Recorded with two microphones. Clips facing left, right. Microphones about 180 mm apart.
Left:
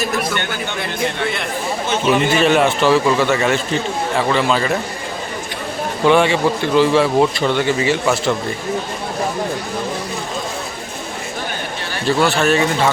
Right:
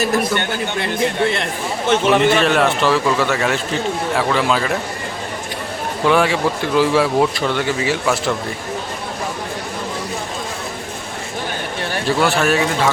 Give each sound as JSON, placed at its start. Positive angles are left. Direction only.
{"t": 1.9, "sound": "a man's voice", "side_deg": -70}
{"t": 2.3, "sound": "speech", "side_deg": 0}
{"t": 6.1, "sound": "speech", "side_deg": 0}
{"t": 12.0, "sound": "speech", "side_deg": -5}